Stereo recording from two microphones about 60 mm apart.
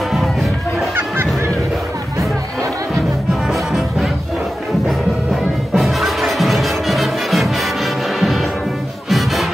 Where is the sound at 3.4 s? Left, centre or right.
Centre.